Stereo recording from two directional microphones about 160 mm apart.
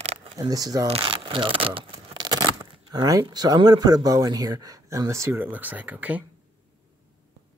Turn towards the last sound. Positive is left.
turn(degrees=-10)  # may be behind; listen again after turning